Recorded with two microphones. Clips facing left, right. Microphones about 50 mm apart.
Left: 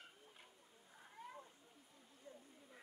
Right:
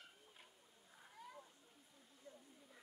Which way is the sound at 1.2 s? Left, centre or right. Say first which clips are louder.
Left 3 dB; left.